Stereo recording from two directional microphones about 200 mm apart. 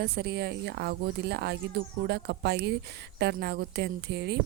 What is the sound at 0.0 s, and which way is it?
Speech, 55° right (ahead or behind).